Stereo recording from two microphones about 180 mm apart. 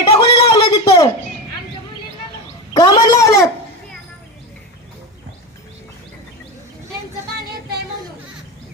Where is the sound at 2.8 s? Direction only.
20° left (ahead or behind).